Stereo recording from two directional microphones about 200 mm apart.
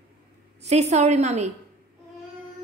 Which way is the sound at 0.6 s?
35° right (ahead or behind).